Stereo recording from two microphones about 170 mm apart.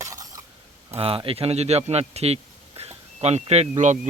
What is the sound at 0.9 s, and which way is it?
A man's voice, 35° right (ahead or behind).